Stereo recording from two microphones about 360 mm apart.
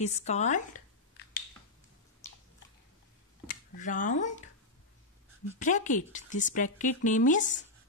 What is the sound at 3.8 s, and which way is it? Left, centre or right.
Speech, left.